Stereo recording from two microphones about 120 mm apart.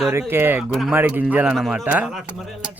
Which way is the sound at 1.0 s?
15° right (ahead or behind).